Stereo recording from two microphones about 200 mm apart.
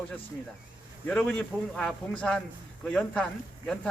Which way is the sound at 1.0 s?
5° left (ahead or behind).